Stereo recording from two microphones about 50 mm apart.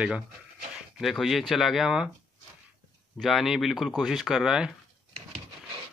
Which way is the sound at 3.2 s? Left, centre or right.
Centre.